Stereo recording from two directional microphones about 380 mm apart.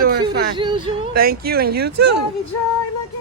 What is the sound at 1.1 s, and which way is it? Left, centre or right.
Speech, right.